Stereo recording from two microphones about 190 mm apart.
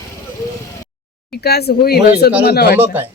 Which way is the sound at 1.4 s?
55° left (ahead or behind).